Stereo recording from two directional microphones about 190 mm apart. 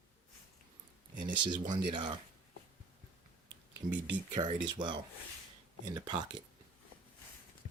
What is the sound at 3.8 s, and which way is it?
Speech, 45° right (ahead or behind).